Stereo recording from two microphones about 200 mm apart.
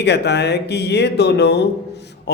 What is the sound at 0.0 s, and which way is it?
A man's voice, 55° left (ahead or behind).